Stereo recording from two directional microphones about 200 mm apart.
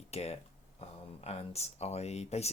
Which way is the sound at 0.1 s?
30° left (ahead or behind).